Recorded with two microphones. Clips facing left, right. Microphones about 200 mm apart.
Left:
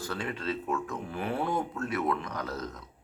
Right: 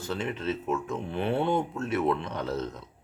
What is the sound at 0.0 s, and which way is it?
Speech, 20° right (ahead or behind).